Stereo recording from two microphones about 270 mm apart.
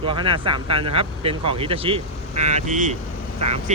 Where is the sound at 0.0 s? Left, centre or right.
Centre.